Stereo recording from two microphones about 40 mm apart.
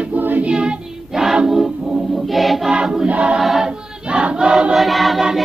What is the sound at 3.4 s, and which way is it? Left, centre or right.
Choir, centre.